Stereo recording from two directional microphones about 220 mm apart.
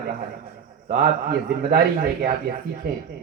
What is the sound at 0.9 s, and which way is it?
A man's voice, 45° right (ahead or behind).